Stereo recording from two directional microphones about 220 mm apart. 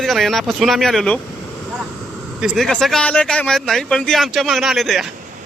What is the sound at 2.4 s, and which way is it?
A man's voice, centre (ahead or behind).